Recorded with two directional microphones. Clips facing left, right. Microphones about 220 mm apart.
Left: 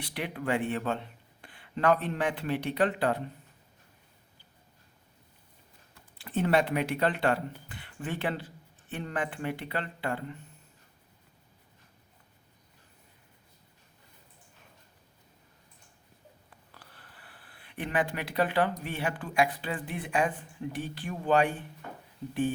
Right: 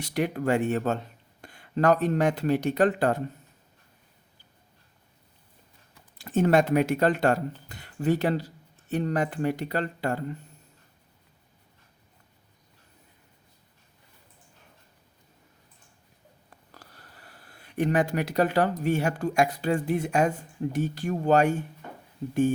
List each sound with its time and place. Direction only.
0.0 s speech: 45° right (ahead or behind)
6.1 s speech: 45° right (ahead or behind)
16.7 s a sound: 40° right (ahead or behind)
18.8 s speech: 45° right (ahead or behind)